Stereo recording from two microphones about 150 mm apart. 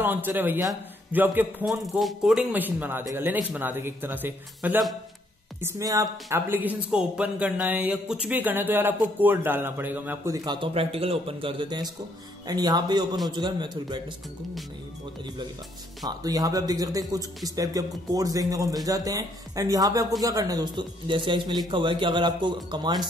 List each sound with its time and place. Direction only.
0.0 s speech: 15° right (ahead or behind)
1.7 s speech: centre (ahead or behind)
10.3 s speech: 30° right (ahead or behind)
16.2 s speech: 25° right (ahead or behind)